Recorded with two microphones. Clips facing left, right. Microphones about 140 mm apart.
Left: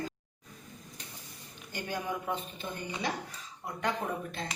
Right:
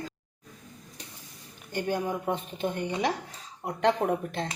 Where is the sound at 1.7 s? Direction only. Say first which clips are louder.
Right 9 dB; 50° right (ahead or behind).